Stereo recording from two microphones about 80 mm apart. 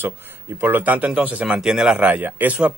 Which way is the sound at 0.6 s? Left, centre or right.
Right.